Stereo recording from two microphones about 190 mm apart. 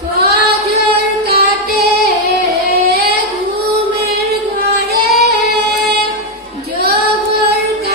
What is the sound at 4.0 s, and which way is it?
Female singing, 55° right (ahead or behind).